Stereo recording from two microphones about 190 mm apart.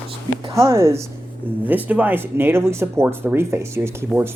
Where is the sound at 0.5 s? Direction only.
15° right (ahead or behind).